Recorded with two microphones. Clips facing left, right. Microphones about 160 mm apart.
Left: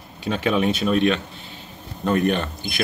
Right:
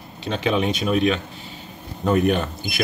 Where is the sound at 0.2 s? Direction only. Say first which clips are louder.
Left 1 dB; 5° left (ahead or behind).